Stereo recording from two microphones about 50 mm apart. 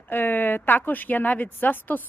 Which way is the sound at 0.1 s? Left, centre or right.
Left.